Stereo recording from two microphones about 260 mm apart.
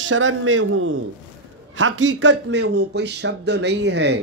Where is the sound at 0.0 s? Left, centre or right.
Right.